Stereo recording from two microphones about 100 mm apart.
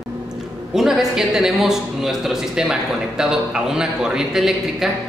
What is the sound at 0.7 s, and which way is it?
Speech, 5° right (ahead or behind).